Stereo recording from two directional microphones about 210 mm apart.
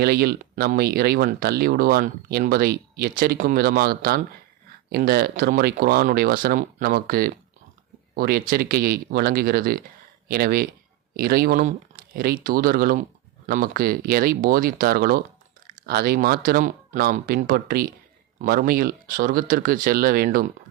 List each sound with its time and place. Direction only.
0.0 s speech: 50° right (ahead or behind)